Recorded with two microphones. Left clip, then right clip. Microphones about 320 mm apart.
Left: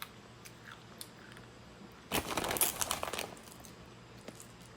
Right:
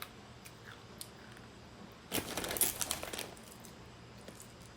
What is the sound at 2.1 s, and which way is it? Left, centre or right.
Crumpling, centre.